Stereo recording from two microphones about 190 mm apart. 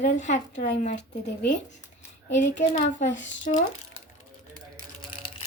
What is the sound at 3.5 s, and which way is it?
Speech, 40° left (ahead or behind).